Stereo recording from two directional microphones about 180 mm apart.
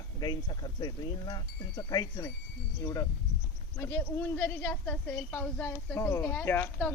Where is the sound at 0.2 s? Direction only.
25° left (ahead or behind).